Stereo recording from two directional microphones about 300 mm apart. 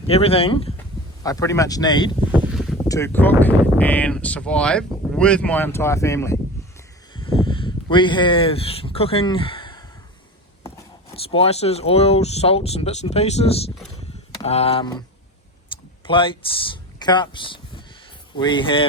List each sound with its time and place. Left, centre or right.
0.1 s speech: centre
2.3 s boat: centre
2.9 s speech: centre
7.1 s a sound: centre
11.1 s speech: centre
16.0 s speech: centre